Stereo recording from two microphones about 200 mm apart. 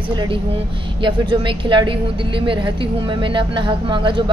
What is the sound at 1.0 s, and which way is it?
A woman's voice, 25° right (ahead or behind).